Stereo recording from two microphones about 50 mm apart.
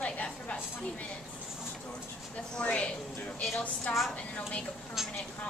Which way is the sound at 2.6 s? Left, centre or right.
Left.